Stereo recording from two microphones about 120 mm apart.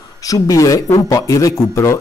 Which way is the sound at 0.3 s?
30° left (ahead or behind).